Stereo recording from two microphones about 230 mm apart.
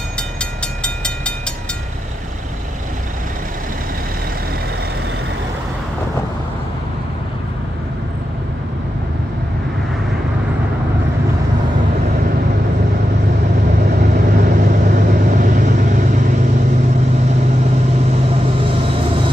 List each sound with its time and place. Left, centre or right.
0.4 s train: centre
14.1 s vehicle: right